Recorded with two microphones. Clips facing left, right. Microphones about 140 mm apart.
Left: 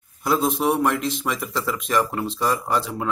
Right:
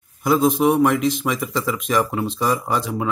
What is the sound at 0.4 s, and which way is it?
Speech, 10° right (ahead or behind).